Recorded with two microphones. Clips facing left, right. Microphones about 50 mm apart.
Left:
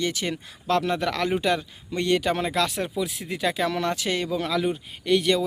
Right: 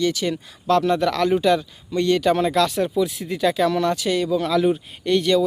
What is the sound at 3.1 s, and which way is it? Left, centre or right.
Speech, left.